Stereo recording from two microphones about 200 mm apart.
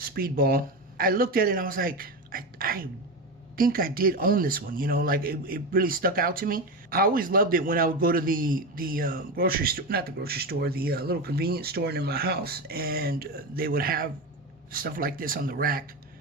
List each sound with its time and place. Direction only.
0.0 s speech: 45° right (ahead or behind)